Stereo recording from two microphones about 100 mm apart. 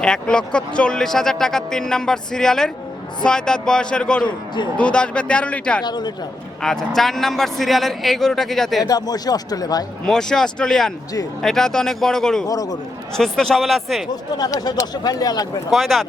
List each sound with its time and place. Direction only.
0.0 s speech: 10° left (ahead or behind)
4.2 s speech: 50° left (ahead or behind)
4.8 s speech: 10° left (ahead or behind)
5.8 s speech: 45° left (ahead or behind)
6.6 s speech: 5° left (ahead or behind)
8.8 s speech: 40° left (ahead or behind)
10.1 s speech: 5° left (ahead or behind)
12.5 s speech: 40° left (ahead or behind)
13.1 s speech: 5° left (ahead or behind)
14.3 s speech: 40° left (ahead or behind)
15.7 s speech: centre (ahead or behind)